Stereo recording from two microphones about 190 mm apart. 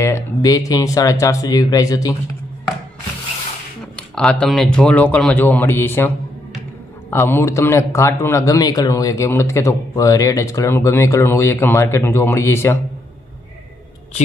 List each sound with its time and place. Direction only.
0.0 s speech: 15° left (ahead or behind)
4.1 s a man's voice: 5° left (ahead or behind)